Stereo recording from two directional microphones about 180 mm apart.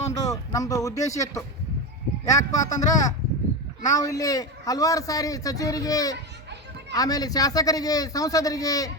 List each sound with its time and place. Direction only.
0.1 s a man's voice: 20° left (ahead or behind)